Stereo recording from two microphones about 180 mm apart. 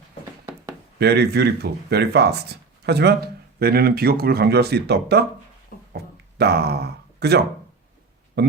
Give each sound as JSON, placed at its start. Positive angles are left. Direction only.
{"t": 0.4, "sound": "chopping", "side_deg": -15}
{"t": 0.9, "sound": "speech", "side_deg": -65}
{"t": 5.9, "sound": "a sound", "side_deg": -65}
{"t": 8.4, "sound": "speech", "side_deg": -65}